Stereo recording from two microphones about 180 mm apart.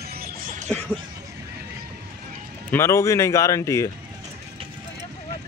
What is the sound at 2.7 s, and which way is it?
Speech, 15° left (ahead or behind).